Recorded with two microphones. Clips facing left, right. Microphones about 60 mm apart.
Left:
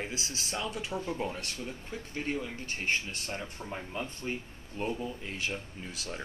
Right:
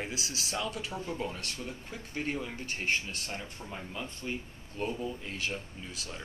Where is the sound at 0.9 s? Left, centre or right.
Centre.